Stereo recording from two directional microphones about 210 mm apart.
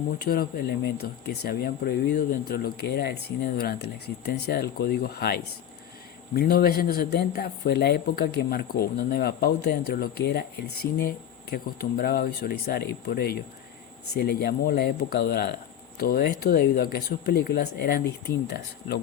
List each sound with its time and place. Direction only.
0.2 s speech: 45° left (ahead or behind)